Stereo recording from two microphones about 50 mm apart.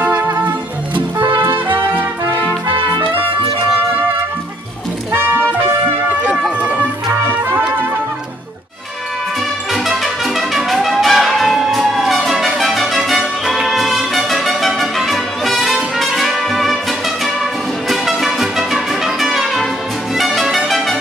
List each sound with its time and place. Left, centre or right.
0.0 s music: right
10.5 s music: centre
17.8 s music: centre